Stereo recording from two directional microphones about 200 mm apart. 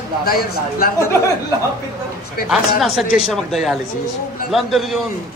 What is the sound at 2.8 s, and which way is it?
A man's voice, centre (ahead or behind).